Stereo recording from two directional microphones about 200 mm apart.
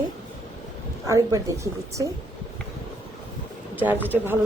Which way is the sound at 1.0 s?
15° right (ahead or behind).